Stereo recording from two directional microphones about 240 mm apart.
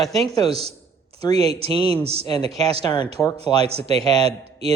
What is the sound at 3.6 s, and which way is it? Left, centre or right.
A man's voice, right.